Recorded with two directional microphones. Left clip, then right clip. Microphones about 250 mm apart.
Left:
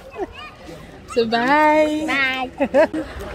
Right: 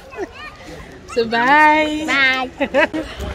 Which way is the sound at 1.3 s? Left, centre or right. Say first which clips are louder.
Right 4 dB; centre.